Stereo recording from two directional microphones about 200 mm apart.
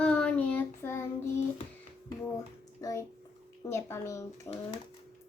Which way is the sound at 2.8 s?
15° left (ahead or behind).